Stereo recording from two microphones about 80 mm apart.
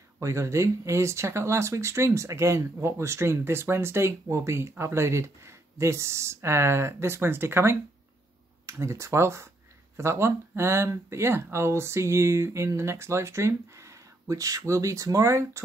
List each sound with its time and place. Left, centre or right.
0.2 s speech: right